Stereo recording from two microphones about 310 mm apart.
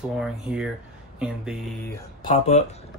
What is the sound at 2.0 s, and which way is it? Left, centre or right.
Speech, centre.